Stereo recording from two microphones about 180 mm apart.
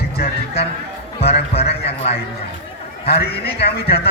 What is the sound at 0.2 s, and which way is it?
Music, 65° left (ahead or behind).